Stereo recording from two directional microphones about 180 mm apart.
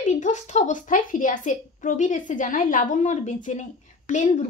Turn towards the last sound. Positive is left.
turn(degrees=45)  # may be behind; listen again after turning